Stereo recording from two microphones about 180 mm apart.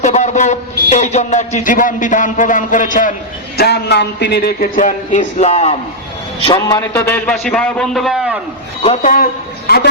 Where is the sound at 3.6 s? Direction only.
65° left (ahead or behind); by 5.7 s 35° left (ahead or behind).